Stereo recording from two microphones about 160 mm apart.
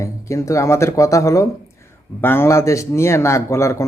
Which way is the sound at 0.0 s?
20° left (ahead or behind).